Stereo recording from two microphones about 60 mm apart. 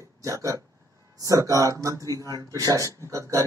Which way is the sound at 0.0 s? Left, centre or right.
Right.